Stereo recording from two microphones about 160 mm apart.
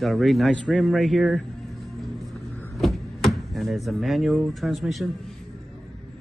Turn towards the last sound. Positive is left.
turn(degrees=0)  # may be behind; listen again after turning